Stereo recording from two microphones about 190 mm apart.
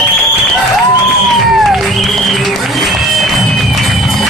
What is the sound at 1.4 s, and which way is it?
Music, centre (ahead or behind).